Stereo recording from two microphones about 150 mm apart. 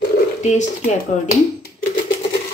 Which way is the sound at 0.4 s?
50° left (ahead or behind).